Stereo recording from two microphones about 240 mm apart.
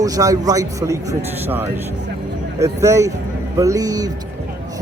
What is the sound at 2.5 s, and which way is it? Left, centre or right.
A man's voice, centre.